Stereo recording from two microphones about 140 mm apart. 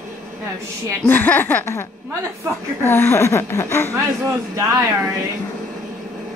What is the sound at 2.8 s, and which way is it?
A woman's voice, 15° left (ahead or behind).